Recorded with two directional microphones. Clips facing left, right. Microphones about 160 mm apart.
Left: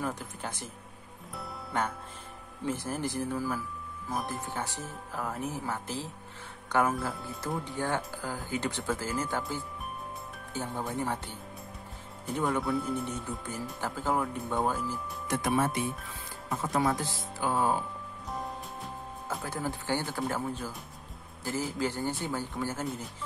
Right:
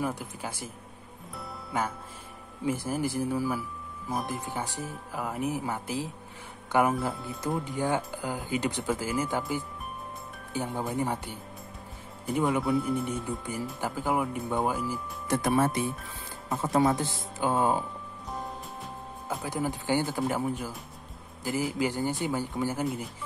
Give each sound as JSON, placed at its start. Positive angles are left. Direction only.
{"t": 0.0, "sound": "speech", "side_deg": -10}
{"t": 1.3, "sound": "music", "side_deg": 0}
{"t": 2.6, "sound": "speech", "side_deg": -10}
{"t": 12.4, "sound": "speech", "side_deg": -10}
{"t": 15.2, "sound": "speech", "side_deg": -40}
{"t": 16.4, "sound": "speech", "side_deg": -25}
{"t": 18.3, "sound": "music", "side_deg": 0}
{"t": 19.4, "sound": "speech", "side_deg": -15}